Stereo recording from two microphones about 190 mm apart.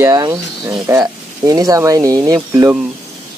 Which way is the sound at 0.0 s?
15° right (ahead or behind).